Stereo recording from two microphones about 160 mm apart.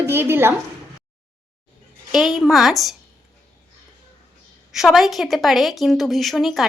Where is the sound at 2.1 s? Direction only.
Centre (ahead or behind).